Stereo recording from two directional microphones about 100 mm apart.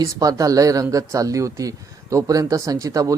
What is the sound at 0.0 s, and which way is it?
A man's voice, 35° right (ahead or behind).